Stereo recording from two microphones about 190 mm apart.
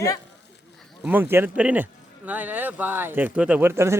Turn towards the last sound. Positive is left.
turn(degrees=-10)  # may be behind; listen again after turning